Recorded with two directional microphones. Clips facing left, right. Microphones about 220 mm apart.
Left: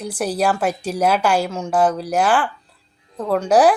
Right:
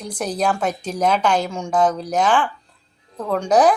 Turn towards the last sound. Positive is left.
turn(degrees=10)  # may be behind; listen again after turning